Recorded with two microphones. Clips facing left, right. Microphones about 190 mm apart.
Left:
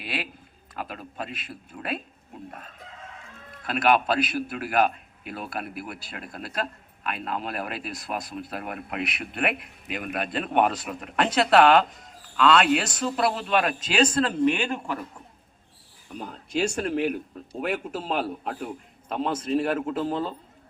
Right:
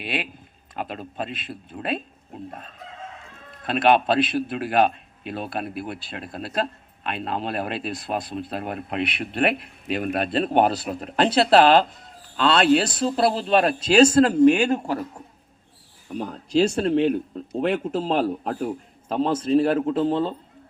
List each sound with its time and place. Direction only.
0.0 s a man's voice: 20° right (ahead or behind)
3.6 s a man's voice: 25° right (ahead or behind)
16.1 s a man's voice: 40° right (ahead or behind)